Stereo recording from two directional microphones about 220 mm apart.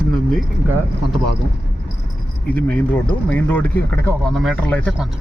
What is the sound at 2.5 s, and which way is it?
Speech, 10° left (ahead or behind).